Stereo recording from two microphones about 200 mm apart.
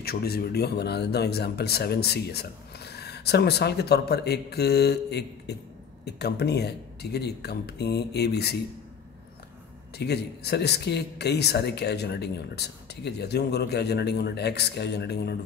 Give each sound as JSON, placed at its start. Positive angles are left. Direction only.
{"t": 0.0, "sound": "speech", "side_deg": 50}
{"t": 9.9, "sound": "speech", "side_deg": 55}